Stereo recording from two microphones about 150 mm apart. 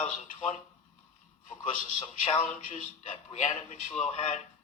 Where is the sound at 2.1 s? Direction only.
50° left (ahead or behind).